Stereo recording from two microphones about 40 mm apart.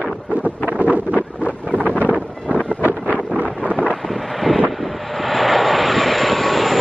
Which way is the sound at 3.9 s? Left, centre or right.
Centre.